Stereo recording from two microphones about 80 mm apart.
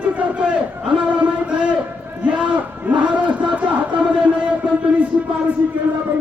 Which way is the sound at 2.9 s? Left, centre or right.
Centre.